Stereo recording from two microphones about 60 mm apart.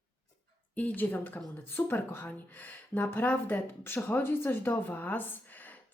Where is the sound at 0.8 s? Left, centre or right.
Left.